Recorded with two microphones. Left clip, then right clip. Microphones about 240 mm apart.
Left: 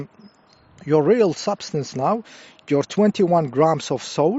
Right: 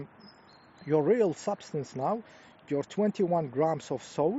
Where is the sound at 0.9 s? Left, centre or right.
Left.